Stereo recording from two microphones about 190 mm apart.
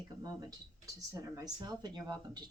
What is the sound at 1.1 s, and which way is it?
Speech, 20° right (ahead or behind).